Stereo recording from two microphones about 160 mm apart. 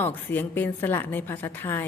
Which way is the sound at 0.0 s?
10° left (ahead or behind).